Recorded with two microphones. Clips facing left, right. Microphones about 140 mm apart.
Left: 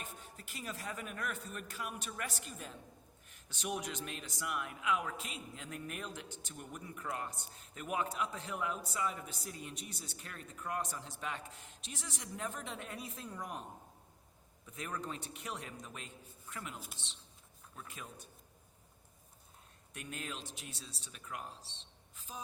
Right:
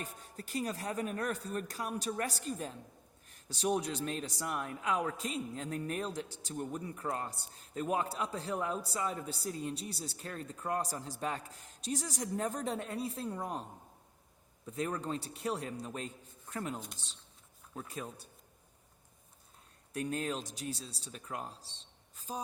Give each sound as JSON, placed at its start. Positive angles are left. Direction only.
{"t": 0.0, "sound": "a man's voice", "side_deg": -40}
{"t": 14.7, "sound": "a man's voice", "side_deg": -35}
{"t": 19.9, "sound": "a man's voice", "side_deg": -35}